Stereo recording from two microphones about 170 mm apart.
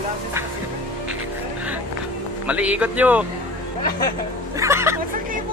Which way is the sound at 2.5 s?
10° right (ahead or behind).